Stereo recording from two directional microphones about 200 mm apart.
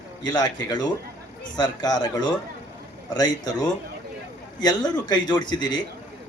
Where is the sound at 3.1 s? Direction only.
20° left (ahead or behind).